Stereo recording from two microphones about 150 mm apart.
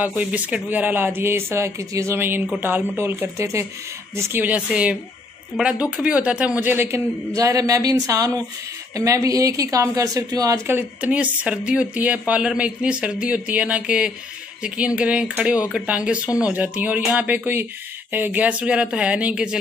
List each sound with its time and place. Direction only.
0.0 s a woman's voice: 10° right (ahead or behind)